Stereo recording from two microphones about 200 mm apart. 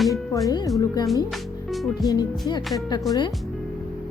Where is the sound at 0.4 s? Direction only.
15° left (ahead or behind).